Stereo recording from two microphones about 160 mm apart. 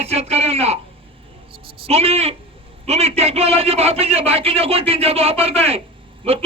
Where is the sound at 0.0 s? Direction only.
40° right (ahead or behind).